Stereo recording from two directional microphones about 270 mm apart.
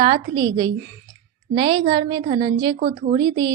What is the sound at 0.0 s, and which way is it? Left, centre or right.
A woman's voice, centre.